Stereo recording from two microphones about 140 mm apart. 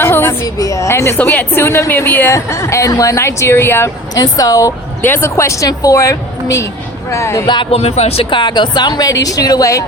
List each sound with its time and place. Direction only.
0.0 s a woman's voice: 15° left (ahead or behind)
7.4 s speech: 35° left (ahead or behind)
7.8 s speech: 50° left (ahead or behind); by 9.8 s 25° left (ahead or behind)